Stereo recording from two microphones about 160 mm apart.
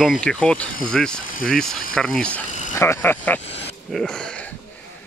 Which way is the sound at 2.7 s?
15° left (ahead or behind).